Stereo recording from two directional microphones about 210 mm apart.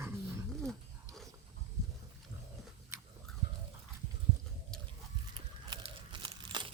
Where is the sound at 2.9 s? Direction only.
15° right (ahead or behind).